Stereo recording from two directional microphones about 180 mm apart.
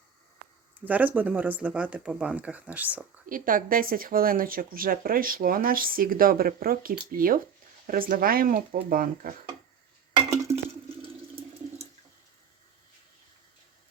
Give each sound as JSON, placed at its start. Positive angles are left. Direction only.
{"t": 0.9, "sound": "speech", "side_deg": -10}
{"t": 3.2, "sound": "speech", "side_deg": -50}